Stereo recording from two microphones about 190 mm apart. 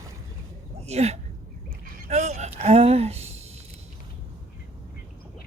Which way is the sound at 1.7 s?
40° right (ahead or behind).